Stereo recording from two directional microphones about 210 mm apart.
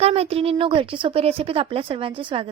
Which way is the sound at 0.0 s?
30° right (ahead or behind).